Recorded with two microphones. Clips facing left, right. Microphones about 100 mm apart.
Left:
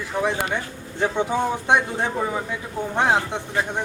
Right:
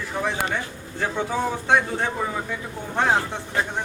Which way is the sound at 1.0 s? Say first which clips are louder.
Left 3 dB; 20° left (ahead or behind).